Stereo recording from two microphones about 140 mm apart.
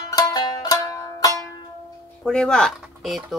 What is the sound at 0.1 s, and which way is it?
Music, 25° left (ahead or behind).